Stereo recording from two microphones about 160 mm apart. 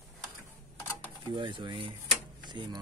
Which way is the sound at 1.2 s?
30° right (ahead or behind).